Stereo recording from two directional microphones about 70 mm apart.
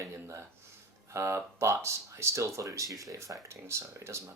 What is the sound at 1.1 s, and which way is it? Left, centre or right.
Speech, right.